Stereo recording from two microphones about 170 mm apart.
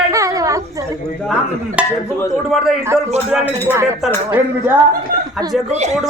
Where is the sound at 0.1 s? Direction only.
20° right (ahead or behind).